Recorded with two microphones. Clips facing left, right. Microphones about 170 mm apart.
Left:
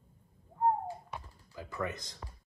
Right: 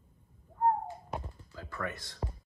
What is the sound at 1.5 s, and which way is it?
Speech, 20° left (ahead or behind).